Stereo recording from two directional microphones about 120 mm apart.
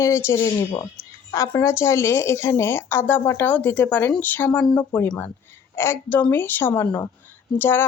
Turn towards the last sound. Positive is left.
turn(degrees=20)  # may be behind; listen again after turning